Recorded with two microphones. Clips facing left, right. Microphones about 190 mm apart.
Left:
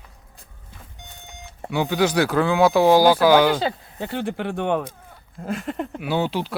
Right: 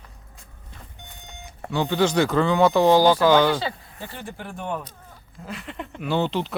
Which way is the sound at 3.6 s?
70° left (ahead or behind).